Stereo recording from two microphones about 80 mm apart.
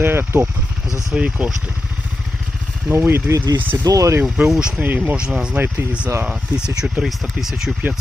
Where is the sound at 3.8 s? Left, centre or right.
Right.